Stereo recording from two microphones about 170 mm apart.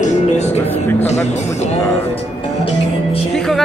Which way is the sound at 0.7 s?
10° left (ahead or behind).